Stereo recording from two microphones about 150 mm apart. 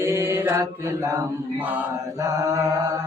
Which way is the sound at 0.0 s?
15° right (ahead or behind).